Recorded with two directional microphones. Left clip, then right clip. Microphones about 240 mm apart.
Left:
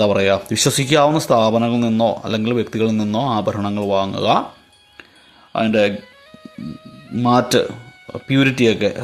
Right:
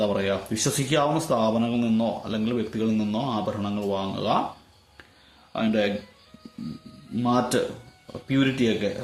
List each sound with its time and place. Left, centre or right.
0.0 s speech: left
5.5 s speech: left
7.2 s speech: left